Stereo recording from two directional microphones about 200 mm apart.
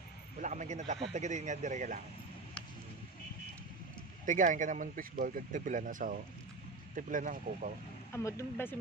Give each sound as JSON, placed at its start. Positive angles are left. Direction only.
{"t": 0.4, "sound": "speech", "side_deg": -35}
{"t": 4.3, "sound": "speech", "side_deg": -40}
{"t": 8.1, "sound": "speech", "side_deg": 15}